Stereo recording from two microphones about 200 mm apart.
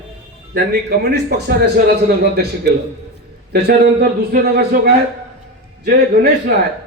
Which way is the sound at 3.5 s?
50° right (ahead or behind).